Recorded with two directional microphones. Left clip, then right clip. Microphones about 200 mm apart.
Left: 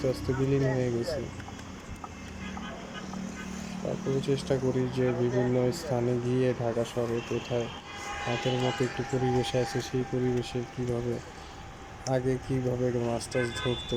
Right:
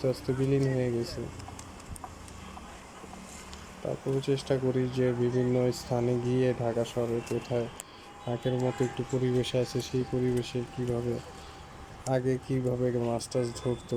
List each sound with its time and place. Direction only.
0.0 s speech: centre (ahead or behind)
4.2 s speech: centre (ahead or behind)